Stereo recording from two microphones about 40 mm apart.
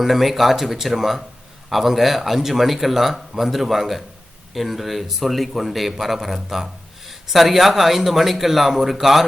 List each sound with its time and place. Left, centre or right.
0.0 s a man's voice: centre